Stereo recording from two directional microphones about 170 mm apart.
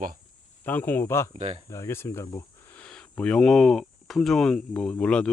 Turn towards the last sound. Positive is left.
turn(degrees=5)  # may be behind; listen again after turning